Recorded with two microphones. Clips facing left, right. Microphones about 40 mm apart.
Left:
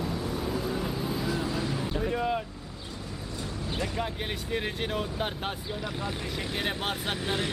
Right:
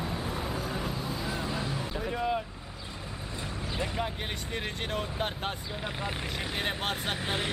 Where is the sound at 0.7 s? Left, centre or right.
Centre.